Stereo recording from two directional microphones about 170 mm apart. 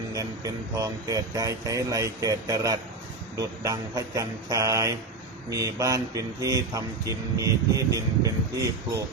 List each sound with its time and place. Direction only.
0.1 s speech: 20° right (ahead or behind)